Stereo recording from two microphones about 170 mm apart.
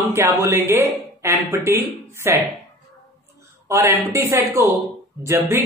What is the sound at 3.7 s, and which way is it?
Speech, 15° right (ahead or behind).